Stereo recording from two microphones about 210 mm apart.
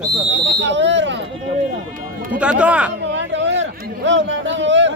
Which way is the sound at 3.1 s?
60° right (ahead or behind).